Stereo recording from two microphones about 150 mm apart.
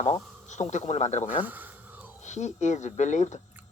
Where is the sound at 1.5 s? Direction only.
10° right (ahead or behind).